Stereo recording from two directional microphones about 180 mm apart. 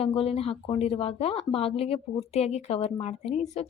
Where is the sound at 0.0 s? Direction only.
35° left (ahead or behind).